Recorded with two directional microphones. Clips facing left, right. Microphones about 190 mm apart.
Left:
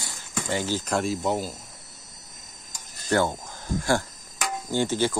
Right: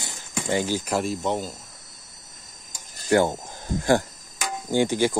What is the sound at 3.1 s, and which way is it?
Speech, 15° right (ahead or behind).